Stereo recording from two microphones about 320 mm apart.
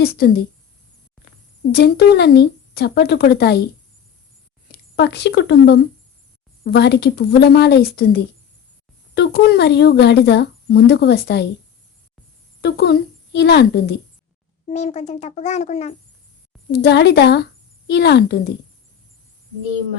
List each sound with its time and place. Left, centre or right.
0.0 s speech: left
1.7 s speech: left
4.7 s speech: left
12.6 s speech: left
14.7 s speech: left
16.7 s speech: left